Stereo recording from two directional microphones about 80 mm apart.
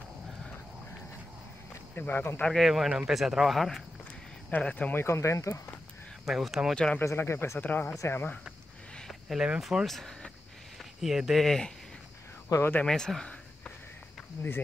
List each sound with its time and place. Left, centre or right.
2.0 s speech: left
2.4 s speech: centre
4.5 s speech: centre
5.0 s speech: left
6.2 s speech: centre
6.7 s speech: centre
7.0 s speech: left
9.3 s speech: centre
12.4 s speech: left
12.8 s a sound: centre